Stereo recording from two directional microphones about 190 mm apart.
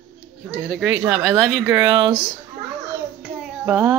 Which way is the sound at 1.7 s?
20° right (ahead or behind).